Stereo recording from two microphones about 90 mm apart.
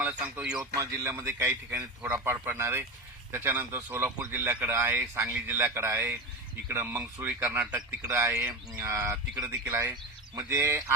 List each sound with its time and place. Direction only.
0.0 s speech: 15° right (ahead or behind)
0.6 s speech: 35° right (ahead or behind)
1.7 s speech: 15° right (ahead or behind)
8.0 s speech: 35° right (ahead or behind)